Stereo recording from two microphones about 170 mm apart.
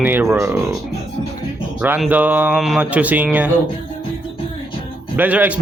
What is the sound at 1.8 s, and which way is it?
A man's voice, 10° right (ahead or behind).